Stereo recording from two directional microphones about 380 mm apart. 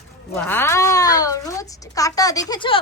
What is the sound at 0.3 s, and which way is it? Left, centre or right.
A child's voice, centre.